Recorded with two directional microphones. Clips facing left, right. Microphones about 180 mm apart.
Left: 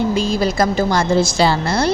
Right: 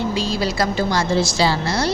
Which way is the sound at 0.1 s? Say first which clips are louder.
Left 4 dB; 50° left (ahead or behind).